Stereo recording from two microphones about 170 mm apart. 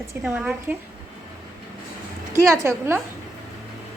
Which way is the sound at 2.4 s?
15° right (ahead or behind).